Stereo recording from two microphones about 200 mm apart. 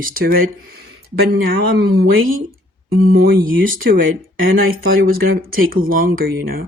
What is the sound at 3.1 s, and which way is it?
Speech, 45° right (ahead or behind).